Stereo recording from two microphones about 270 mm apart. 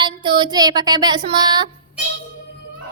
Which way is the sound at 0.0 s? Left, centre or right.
Centre.